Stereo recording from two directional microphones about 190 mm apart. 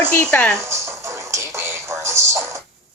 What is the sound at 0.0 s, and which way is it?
Speech, 5° left (ahead or behind).